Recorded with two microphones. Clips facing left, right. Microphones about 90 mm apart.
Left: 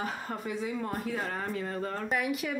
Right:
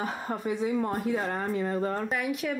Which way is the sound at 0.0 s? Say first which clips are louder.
Right 4 dB; 15° right (ahead or behind).